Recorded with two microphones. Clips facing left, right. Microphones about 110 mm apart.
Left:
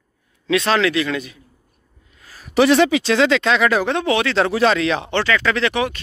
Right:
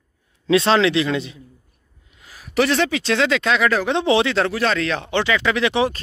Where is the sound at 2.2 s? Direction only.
15° right (ahead or behind).